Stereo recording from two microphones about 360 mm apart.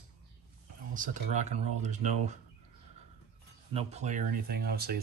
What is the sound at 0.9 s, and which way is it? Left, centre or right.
Speech, right.